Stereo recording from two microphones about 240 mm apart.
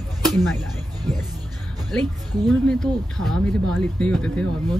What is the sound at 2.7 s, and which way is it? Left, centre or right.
Speech, centre.